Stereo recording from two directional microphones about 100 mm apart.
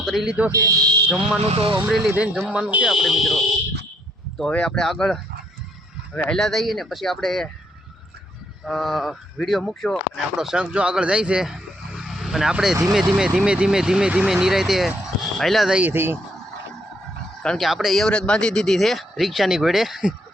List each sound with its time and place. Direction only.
0.0 s speech: 5° right (ahead or behind)
0.5 s speech: 35° right (ahead or behind)
1.5 s speech: 70° right (ahead or behind)
2.0 s speech: 15° right (ahead or behind)
2.9 s speech: 5° right (ahead or behind)
8.6 s speech: centre (ahead or behind)
15.8 s speech: 20° right (ahead or behind)
17.4 s speech: 5° left (ahead or behind)